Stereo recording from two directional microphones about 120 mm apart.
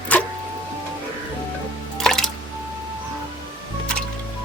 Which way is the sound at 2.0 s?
5° left (ahead or behind).